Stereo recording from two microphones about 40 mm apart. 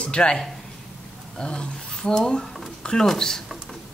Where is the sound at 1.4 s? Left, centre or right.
Left.